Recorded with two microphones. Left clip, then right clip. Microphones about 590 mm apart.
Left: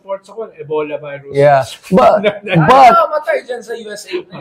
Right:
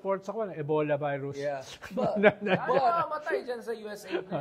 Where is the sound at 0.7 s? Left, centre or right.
Right.